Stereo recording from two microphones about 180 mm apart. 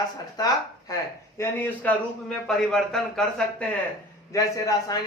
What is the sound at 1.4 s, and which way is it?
A man's voice, 10° left (ahead or behind).